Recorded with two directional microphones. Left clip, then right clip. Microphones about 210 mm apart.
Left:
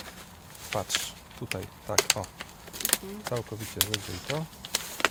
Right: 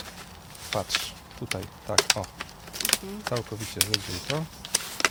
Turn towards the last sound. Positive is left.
turn(degrees=-5)  # may be behind; listen again after turning